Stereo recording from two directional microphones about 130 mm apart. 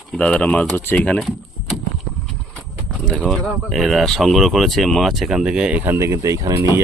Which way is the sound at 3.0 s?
5° left (ahead or behind).